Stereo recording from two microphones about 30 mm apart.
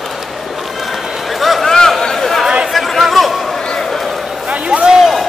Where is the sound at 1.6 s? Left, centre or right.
Centre.